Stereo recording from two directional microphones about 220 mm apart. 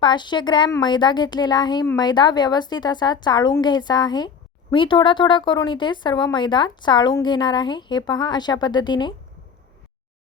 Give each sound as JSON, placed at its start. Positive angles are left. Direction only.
{"t": 0.0, "sound": "speech", "side_deg": 20}